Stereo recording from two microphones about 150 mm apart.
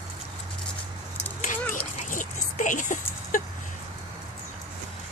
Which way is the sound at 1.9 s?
60° left (ahead or behind).